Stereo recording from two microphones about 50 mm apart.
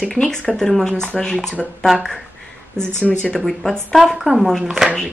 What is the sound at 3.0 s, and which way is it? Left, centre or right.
Speech, left.